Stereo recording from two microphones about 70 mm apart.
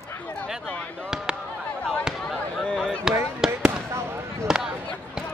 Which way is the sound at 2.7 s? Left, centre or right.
Centre.